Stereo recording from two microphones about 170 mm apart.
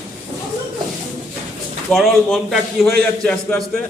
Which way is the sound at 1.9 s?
Centre (ahead or behind).